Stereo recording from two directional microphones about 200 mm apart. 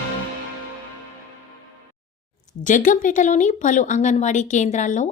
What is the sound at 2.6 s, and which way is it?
A woman's voice, 40° left (ahead or behind).